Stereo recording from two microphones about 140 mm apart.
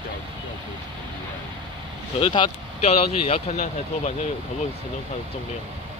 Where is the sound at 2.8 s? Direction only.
50° left (ahead or behind).